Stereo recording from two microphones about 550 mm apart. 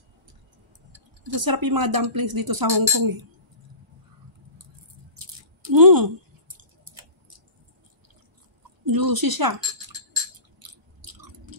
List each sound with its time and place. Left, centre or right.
1.2 s speech: right
5.2 s a sound: right
8.8 s speech: right
10.6 s chewing: right